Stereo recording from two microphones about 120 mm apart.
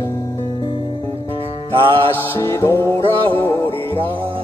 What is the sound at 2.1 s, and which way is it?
Music, 20° left (ahead or behind).